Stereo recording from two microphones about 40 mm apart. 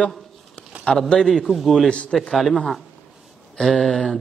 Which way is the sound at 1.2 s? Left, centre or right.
Centre.